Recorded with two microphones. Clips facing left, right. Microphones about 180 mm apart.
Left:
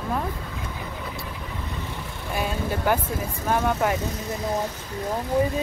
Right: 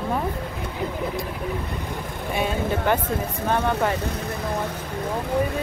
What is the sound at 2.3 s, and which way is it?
Speech, 5° left (ahead or behind).